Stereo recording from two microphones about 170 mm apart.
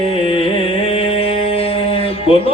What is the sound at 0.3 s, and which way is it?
Music, 35° left (ahead or behind).